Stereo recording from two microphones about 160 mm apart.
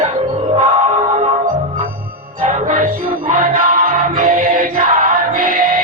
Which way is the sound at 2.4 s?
55° right (ahead or behind).